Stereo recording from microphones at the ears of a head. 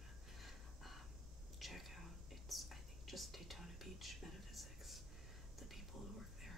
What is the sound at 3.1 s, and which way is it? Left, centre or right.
Whispering, centre.